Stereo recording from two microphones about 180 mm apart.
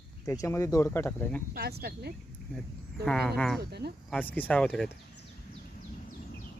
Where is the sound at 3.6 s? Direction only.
65° right (ahead or behind).